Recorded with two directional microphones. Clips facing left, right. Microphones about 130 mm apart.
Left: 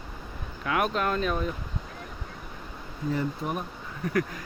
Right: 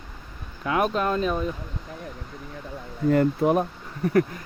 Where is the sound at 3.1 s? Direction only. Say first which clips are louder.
Right 10 dB; 80° right.